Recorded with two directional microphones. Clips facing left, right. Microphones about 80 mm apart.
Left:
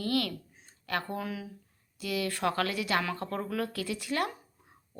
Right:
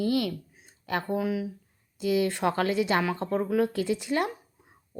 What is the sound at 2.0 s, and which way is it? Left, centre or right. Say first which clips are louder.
Speech: right 7 dB; right.